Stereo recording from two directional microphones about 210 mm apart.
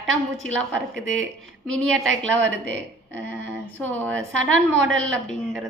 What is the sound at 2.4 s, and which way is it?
Speech, 60° right (ahead or behind).